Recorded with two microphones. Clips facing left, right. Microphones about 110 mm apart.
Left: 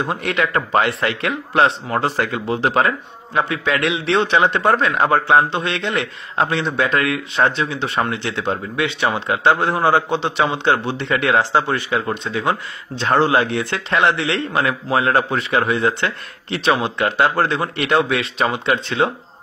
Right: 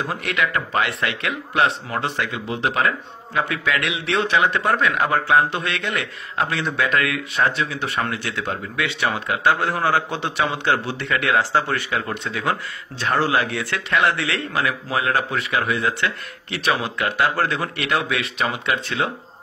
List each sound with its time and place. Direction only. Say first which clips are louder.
0.0 s a man's voice: left 3 dB; 30° left (ahead or behind)